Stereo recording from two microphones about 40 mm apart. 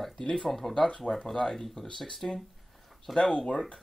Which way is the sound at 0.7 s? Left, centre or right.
Left.